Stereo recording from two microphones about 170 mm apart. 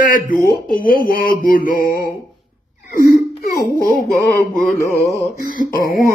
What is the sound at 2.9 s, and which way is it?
Speech, 65° left (ahead or behind).